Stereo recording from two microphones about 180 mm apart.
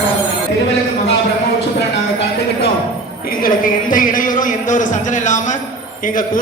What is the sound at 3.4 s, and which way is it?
A man's voice, 50° left (ahead or behind).